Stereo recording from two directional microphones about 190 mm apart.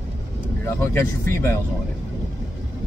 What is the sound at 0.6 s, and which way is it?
Speech, 15° left (ahead or behind).